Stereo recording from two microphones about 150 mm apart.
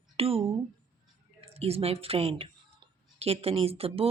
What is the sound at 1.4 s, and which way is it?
Speech, 40° right (ahead or behind).